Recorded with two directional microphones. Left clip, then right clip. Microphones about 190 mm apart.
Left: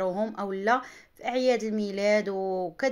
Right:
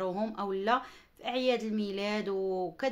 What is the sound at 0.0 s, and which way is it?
Speech, 15° left (ahead or behind).